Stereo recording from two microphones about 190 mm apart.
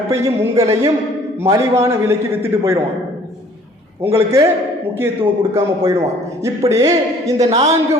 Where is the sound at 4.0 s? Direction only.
15° right (ahead or behind).